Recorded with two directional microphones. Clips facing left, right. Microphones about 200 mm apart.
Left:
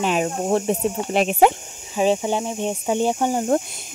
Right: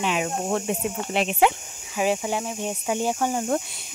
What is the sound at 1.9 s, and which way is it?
Speech, 25° left (ahead or behind).